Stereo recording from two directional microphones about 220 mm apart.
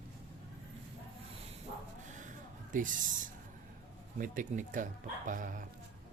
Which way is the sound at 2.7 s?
35° right (ahead or behind).